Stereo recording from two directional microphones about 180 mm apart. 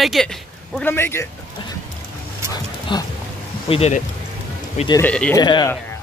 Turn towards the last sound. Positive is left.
turn(degrees=25)  # may be behind; listen again after turning